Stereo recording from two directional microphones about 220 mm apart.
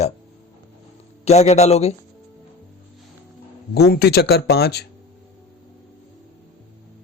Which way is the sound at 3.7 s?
45° left (ahead or behind).